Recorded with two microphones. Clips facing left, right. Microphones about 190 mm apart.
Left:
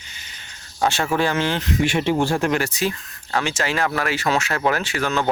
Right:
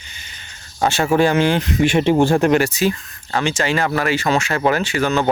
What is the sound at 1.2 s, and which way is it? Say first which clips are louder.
Speech: right 6 dB; 15° right (ahead or behind).